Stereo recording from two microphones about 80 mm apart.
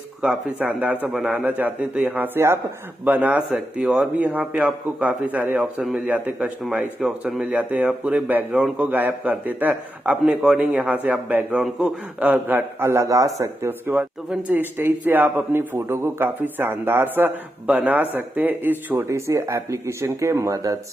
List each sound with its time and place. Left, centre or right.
0.2 s a man's voice: centre
3.1 s a man's voice: centre
6.7 s speech: centre
7.5 s a man's voice: centre
12.9 s a man's voice: right
19.0 s speech: right